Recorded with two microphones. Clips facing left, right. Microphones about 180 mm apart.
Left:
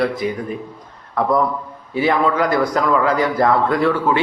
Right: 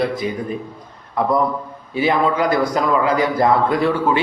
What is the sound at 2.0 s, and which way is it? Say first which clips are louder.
Speech: even; 20° right (ahead or behind).